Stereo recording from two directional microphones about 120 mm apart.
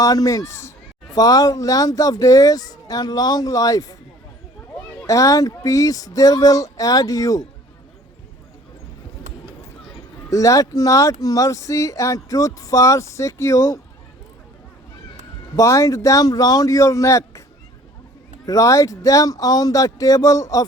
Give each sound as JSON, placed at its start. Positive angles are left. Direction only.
{"t": 0.0, "sound": "speech", "side_deg": 30}
{"t": 5.0, "sound": "speech", "side_deg": 25}
{"t": 10.2, "sound": "speech", "side_deg": 25}
{"t": 15.5, "sound": "speech", "side_deg": 25}
{"t": 18.4, "sound": "speech", "side_deg": 30}